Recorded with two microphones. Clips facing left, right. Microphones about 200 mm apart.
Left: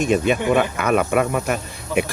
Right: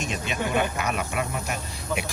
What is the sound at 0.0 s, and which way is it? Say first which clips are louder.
Speech: left 11 dB; 55° left (ahead or behind).